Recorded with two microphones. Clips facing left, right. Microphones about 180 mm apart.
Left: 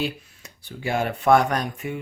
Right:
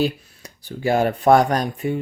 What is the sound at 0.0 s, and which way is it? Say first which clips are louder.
Speech: right 6 dB; 40° right (ahead or behind).